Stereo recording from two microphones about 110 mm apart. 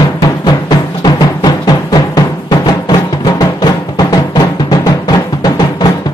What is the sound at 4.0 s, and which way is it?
Music, 35° left (ahead or behind).